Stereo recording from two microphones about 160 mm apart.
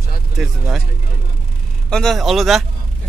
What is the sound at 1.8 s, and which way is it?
Speech, 5° left (ahead or behind).